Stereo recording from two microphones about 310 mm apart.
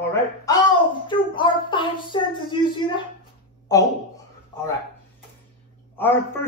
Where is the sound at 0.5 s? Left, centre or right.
Centre.